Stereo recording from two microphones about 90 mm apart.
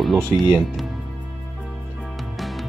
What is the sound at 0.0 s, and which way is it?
Speech, centre (ahead or behind).